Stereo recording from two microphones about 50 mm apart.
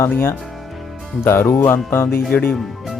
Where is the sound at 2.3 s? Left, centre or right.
Left.